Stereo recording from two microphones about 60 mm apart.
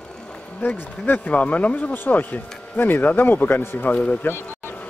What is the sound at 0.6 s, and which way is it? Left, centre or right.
Speech, left.